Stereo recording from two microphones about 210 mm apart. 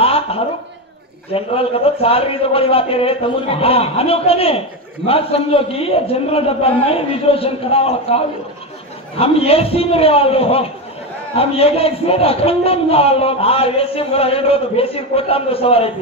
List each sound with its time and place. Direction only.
0.0 s a sound: 30° left (ahead or behind)
1.3 s a man's voice: 25° left (ahead or behind)
9.2 s a man's voice: 25° left (ahead or behind)